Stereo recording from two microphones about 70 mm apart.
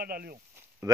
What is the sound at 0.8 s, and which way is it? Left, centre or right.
Speech, right.